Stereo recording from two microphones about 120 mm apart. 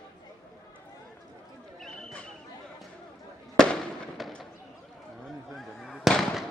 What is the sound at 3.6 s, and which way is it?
Fireworks, 5° left (ahead or behind).